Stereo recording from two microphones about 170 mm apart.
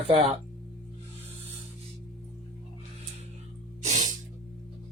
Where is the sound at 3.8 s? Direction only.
50° right (ahead or behind).